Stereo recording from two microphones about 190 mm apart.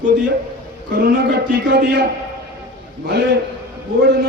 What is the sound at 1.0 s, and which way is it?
A man's voice, 60° right (ahead or behind).